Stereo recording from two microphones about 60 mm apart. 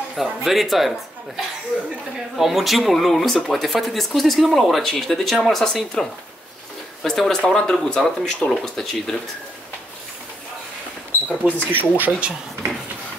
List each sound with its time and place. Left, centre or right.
0.1 s speech: centre
11.2 s speech: left
11.7 s speech: right